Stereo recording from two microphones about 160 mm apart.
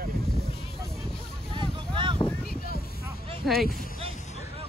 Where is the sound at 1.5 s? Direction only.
30° right (ahead or behind).